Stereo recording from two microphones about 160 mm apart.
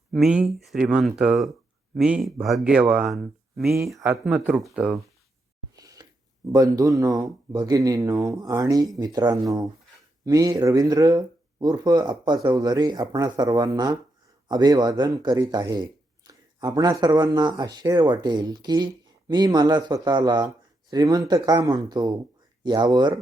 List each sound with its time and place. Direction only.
0.1 s speech: 5° right (ahead or behind)
3.9 s speech: 15° right (ahead or behind)
4.3 s speech: 5° right (ahead or behind)
5.8 s a sound: 20° right (ahead or behind)
6.5 s speech: 20° right (ahead or behind)